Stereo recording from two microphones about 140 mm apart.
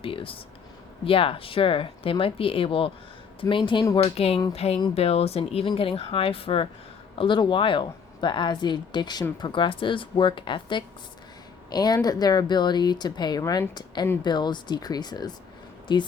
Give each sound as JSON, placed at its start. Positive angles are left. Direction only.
{"t": 0.0, "sound": "speech", "side_deg": 40}
{"t": 3.4, "sound": "speech", "side_deg": 25}
{"t": 3.9, "sound": "speech", "side_deg": 45}